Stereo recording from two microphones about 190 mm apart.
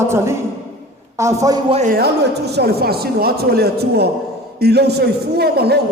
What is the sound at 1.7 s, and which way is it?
Speech, 40° right (ahead or behind).